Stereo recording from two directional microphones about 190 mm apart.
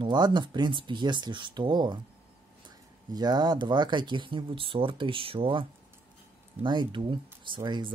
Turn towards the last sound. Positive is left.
turn(degrees=-25)  # may be behind; listen again after turning